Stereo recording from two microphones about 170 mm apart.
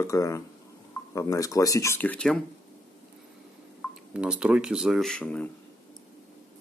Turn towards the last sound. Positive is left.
turn(degrees=5)  # may be behind; listen again after turning